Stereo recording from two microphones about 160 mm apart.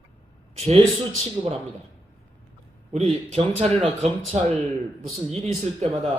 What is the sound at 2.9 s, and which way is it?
Speech, 45° right (ahead or behind).